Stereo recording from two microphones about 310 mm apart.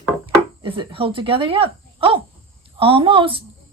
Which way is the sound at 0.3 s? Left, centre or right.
Centre.